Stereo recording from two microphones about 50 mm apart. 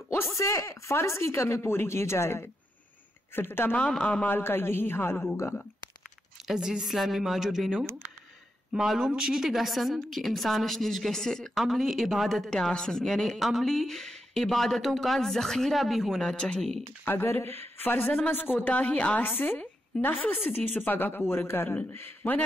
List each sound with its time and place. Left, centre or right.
0.1 s speech: left
3.3 s a man's voice: left
4.0 s a man's voice: left
4.3 s a man's voice: left
6.4 s speech: centre
7.8 s speech: right
8.7 s speech: centre
11.5 s speech: centre
16.3 s speech: centre
17.2 s a man's voice: left
18.0 s a woman's voice: left
19.2 s a woman's voice: left
21.3 s a man's voice: left